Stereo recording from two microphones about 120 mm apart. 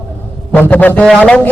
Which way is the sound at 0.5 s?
15° left (ahead or behind).